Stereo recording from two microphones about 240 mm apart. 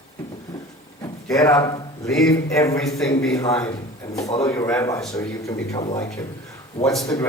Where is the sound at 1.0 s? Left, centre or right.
Centre.